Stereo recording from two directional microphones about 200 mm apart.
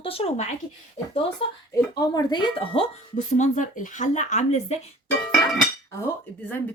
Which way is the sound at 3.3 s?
40° left (ahead or behind).